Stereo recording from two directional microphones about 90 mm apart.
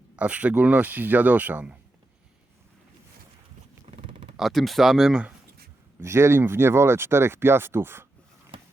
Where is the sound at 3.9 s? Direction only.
90° right.